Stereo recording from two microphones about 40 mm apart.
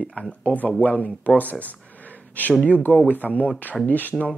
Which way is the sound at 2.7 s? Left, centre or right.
Left.